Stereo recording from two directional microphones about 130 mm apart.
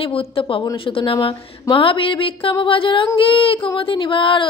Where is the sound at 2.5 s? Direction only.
40° left (ahead or behind).